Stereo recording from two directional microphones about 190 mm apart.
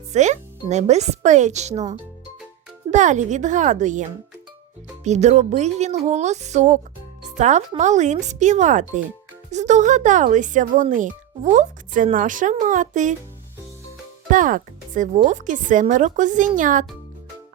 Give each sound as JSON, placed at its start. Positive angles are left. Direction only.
{"t": 0.1, "sound": "speech", "side_deg": -40}
{"t": 2.9, "sound": "speech", "side_deg": -40}
{"t": 5.0, "sound": "speech", "side_deg": -35}
{"t": 7.3, "sound": "music", "side_deg": -40}
{"t": 7.8, "sound": "a woman's voice", "side_deg": -40}
{"t": 14.3, "sound": "a woman's voice", "side_deg": -45}